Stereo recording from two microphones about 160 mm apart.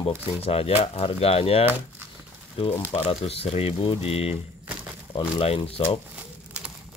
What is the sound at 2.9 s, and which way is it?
Speech, 40° left (ahead or behind).